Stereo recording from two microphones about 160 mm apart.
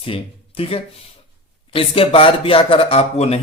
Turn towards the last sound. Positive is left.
turn(degrees=40)  # may be behind; listen again after turning